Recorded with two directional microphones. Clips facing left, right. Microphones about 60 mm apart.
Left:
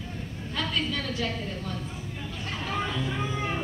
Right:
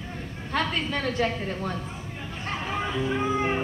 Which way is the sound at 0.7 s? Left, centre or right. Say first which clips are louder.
Right 3 dB; right.